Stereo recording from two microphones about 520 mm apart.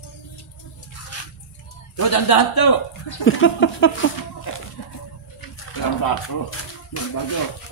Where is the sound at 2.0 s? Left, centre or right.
Left.